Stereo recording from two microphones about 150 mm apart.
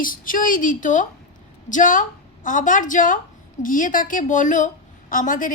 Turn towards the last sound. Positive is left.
turn(degrees=60)  # may be behind; listen again after turning